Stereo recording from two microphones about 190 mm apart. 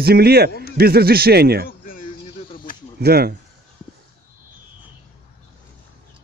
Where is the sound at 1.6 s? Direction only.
45° left (ahead or behind).